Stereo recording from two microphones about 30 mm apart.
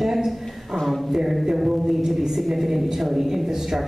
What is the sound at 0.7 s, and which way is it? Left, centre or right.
Speech, centre.